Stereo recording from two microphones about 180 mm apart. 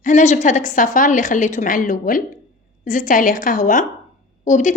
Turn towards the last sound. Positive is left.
turn(degrees=45)  # may be behind; listen again after turning